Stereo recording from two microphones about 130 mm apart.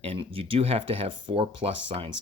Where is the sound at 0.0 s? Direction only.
45° right (ahead or behind).